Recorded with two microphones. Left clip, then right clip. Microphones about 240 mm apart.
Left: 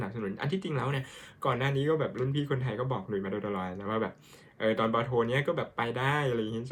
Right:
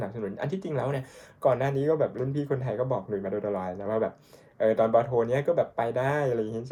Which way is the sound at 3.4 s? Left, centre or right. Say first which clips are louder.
Right 4 dB; left.